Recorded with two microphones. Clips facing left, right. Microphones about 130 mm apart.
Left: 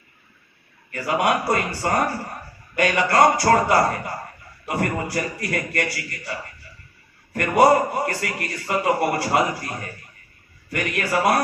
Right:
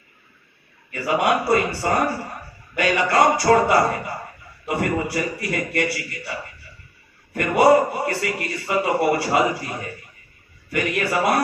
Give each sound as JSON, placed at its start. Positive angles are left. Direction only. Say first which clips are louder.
{"t": 0.9, "sound": "a man's voice", "louder": "right 1 dB", "side_deg": 45}
{"t": 7.3, "sound": "a man's voice", "louder": "right 1 dB", "side_deg": 45}